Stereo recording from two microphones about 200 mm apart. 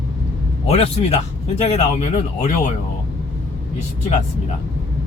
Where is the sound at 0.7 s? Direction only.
30° left (ahead or behind).